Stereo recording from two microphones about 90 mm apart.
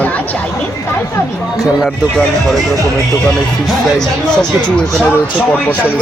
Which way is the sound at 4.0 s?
5° left (ahead or behind).